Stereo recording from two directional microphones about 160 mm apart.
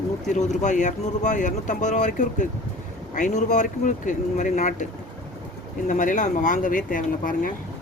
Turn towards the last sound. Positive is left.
turn(degrees=60)  # may be behind; listen again after turning